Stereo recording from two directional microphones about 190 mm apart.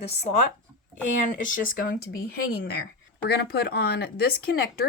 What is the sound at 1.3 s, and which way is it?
Speech, 45° left (ahead or behind).